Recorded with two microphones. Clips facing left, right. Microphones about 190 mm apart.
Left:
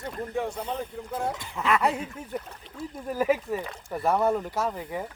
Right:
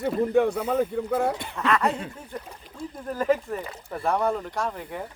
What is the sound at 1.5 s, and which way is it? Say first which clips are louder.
Speech: left 2 dB; 10° left (ahead or behind).